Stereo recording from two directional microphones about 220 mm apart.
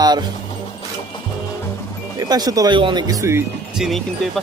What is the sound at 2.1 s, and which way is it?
Speech, 15° right (ahead or behind).